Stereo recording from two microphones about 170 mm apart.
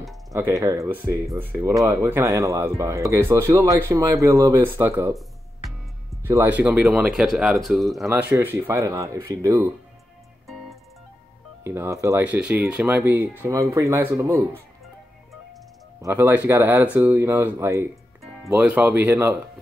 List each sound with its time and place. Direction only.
0.3 s speech: 20° right (ahead or behind)
6.2 s speech: 15° right (ahead or behind)
8.1 s speech: 15° right (ahead or behind)
11.6 s speech: 15° right (ahead or behind)
16.0 s speech: 15° right (ahead or behind)